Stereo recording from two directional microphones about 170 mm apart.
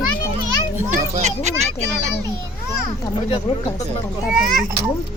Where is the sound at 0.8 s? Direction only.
45° right (ahead or behind).